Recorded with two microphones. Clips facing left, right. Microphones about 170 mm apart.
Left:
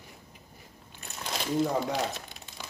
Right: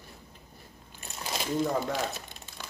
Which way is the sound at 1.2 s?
5° right (ahead or behind).